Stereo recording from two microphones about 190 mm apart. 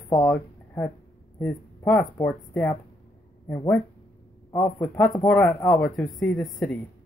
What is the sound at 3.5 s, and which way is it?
Speech, 20° left (ahead or behind).